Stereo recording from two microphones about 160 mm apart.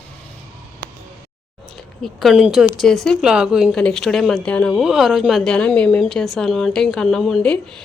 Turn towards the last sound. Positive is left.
turn(degrees=5)  # may be behind; listen again after turning